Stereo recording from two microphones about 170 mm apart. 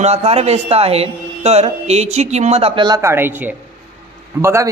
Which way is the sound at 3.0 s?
15° right (ahead or behind).